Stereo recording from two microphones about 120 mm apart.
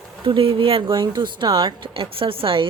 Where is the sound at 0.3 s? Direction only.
50° right (ahead or behind).